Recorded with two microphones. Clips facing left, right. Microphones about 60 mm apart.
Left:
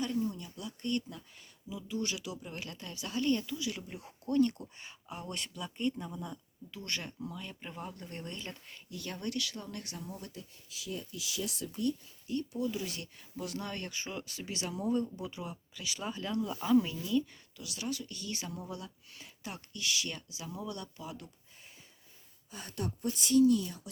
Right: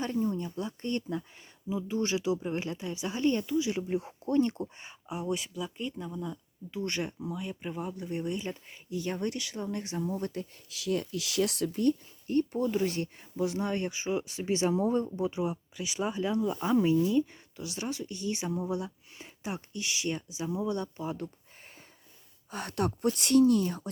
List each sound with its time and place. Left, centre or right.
0.0 s speech: right
5.0 s speech: centre
6.7 s speech: right
10.1 s speech: right
10.7 s speech: right
13.3 s speech: right
16.6 s speech: right
22.5 s speech: right